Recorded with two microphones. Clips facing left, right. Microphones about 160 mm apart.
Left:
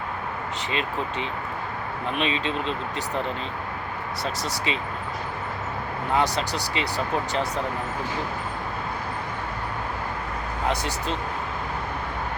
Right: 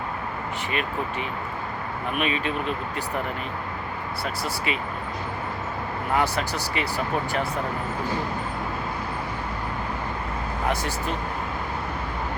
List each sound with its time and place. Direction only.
2.1 s speech: 25° left (ahead or behind)
6.1 s speech: 15° left (ahead or behind)